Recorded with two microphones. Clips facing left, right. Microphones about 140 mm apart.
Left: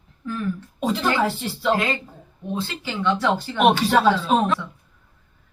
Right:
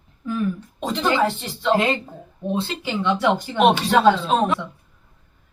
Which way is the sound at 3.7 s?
5° left (ahead or behind).